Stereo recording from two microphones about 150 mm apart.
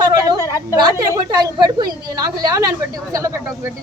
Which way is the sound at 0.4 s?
20° left (ahead or behind).